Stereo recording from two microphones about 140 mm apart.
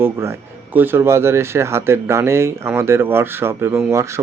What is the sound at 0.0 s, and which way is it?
Speech, 15° right (ahead or behind).